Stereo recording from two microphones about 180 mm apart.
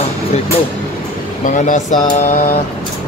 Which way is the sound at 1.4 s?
45° left (ahead or behind).